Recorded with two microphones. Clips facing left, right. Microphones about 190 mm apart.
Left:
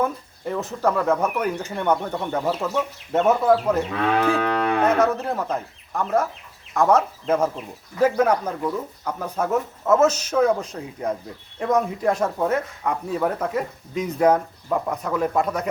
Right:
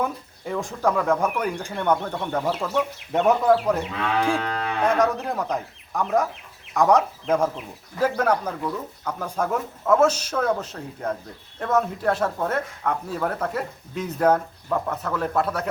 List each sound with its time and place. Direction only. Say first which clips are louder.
0.0 s speech: left 3 dB; centre (ahead or behind)
4.3 s moo: left 4 dB; 55° left (ahead or behind)
4.8 s speech: right 1 dB; 5° left (ahead or behind)